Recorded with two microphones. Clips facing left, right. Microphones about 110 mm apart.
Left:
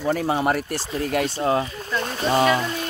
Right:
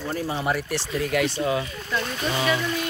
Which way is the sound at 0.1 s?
70° left (ahead or behind).